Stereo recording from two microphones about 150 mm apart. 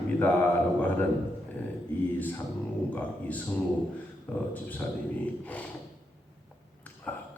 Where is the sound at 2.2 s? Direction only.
10° left (ahead or behind).